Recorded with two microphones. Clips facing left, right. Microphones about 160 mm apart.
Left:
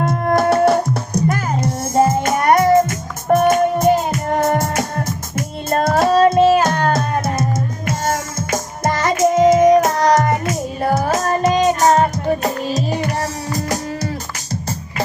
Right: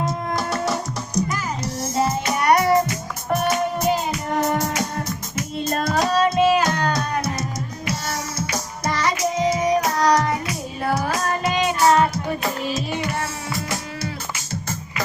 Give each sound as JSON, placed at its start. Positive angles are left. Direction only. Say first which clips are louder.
{"t": 0.0, "sound": "music", "louder": "left 9 dB", "side_deg": 55}